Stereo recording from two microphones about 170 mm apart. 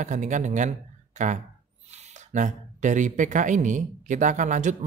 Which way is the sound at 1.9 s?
40° right (ahead or behind).